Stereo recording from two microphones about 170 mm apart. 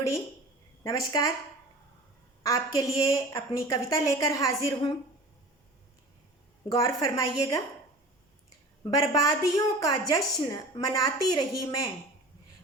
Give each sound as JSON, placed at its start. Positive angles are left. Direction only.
{"t": 0.9, "sound": "a woman's voice", "side_deg": 20}
{"t": 2.4, "sound": "a woman's voice", "side_deg": 20}
{"t": 6.7, "sound": "a woman's voice", "side_deg": 20}
{"t": 8.8, "sound": "a woman's voice", "side_deg": 20}